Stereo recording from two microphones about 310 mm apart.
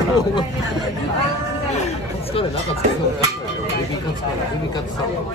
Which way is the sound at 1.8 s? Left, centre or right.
Left.